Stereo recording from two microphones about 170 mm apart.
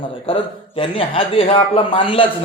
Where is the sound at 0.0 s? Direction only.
30° left (ahead or behind).